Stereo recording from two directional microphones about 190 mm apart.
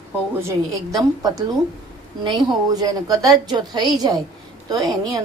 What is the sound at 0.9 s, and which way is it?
A woman's voice, 20° right (ahead or behind).